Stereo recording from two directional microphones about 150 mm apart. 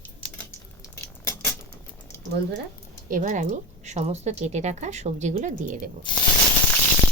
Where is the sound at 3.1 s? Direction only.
60° right (ahead or behind).